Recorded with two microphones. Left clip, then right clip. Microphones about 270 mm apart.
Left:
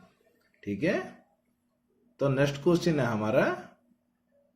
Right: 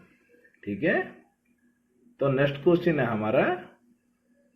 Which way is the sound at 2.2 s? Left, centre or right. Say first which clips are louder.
Right 3 dB; left.